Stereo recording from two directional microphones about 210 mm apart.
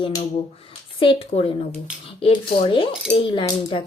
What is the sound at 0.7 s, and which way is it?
Speech, 25° left (ahead or behind).